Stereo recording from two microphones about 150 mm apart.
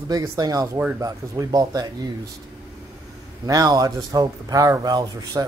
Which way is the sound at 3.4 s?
25° right (ahead or behind).